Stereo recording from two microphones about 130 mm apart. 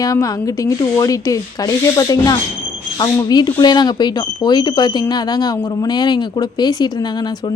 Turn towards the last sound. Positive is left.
turn(degrees=35)  # may be behind; listen again after turning